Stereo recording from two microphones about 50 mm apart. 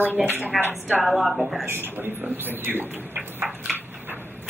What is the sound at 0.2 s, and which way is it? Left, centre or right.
A woman's voice, centre.